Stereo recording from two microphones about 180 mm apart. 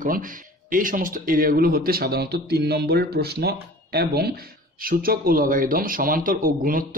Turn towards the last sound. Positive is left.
turn(degrees=-50)  # may be behind; listen again after turning